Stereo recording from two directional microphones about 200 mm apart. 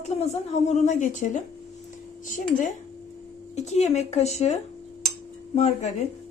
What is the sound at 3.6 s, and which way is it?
A woman's voice, 35° left (ahead or behind).